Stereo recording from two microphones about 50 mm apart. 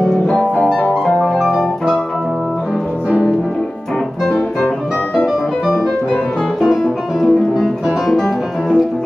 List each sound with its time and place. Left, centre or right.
1.4 s music: centre
3.1 s music: centre
6.8 s music: centre